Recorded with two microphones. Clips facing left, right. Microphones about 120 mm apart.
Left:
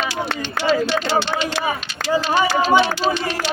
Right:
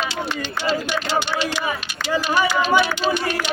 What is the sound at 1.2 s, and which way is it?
Speech, 30° left (ahead or behind).